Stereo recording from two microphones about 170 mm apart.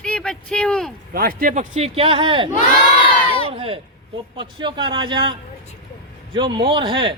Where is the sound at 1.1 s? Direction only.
60° right (ahead or behind).